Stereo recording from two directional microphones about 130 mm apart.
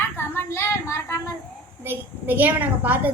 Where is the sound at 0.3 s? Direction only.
20° left (ahead or behind).